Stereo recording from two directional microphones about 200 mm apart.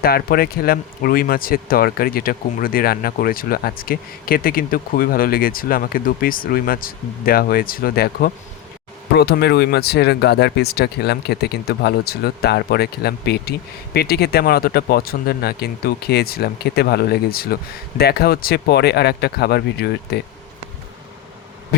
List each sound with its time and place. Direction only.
0.0 s speech: 50° left (ahead or behind)